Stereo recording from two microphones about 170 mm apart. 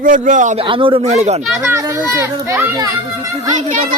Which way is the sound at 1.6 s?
15° right (ahead or behind).